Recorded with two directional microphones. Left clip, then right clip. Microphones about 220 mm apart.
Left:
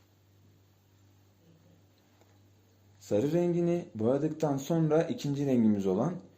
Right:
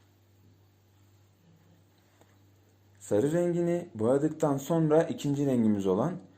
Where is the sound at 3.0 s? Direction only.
Centre (ahead or behind).